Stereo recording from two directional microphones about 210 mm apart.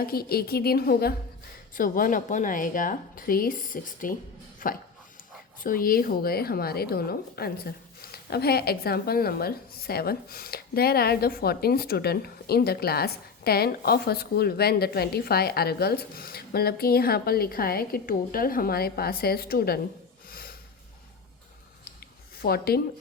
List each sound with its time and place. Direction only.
0.0 s a woman's voice: 45° left (ahead or behind)
4.6 s dog: 40° left (ahead or behind)
5.6 s a woman's voice: 45° left (ahead or behind)
20.3 s snort: 45° left (ahead or behind)
22.4 s a woman's voice: 45° left (ahead or behind)